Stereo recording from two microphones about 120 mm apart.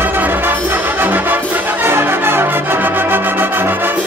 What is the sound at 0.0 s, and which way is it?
Brass instrument, 15° right (ahead or behind).